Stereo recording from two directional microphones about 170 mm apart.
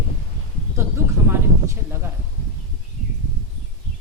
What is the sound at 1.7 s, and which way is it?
Speech, 15° right (ahead or behind).